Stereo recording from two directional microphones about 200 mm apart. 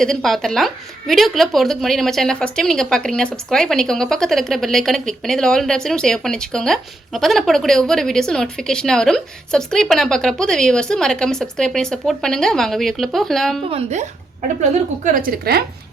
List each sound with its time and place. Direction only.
0.0 s a woman's voice: centre (ahead or behind)
13.7 s a woman's voice: 35° right (ahead or behind); by 15.6 s 50° right (ahead or behind)